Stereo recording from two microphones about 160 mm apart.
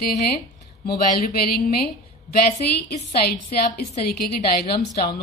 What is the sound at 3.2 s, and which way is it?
A woman's voice, 75° left (ahead or behind).